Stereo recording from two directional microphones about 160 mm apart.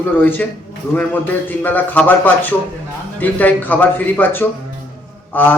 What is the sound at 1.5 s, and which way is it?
Speech, 10° left (ahead or behind).